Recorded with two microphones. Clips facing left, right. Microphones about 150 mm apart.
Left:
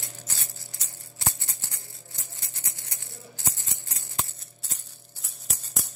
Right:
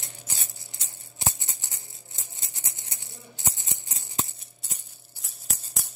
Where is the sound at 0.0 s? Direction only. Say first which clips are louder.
Left 1 dB; 20° right (ahead or behind).